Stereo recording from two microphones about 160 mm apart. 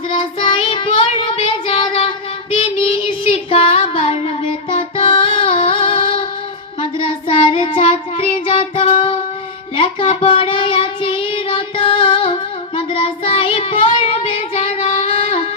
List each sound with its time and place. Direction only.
0.1 s child singing: 35° left (ahead or behind)
4.7 s music: 35° left (ahead or behind)
7.0 s child singing: 35° left (ahead or behind)